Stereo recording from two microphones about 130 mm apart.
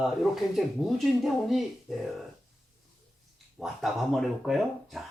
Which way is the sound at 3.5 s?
Centre (ahead or behind).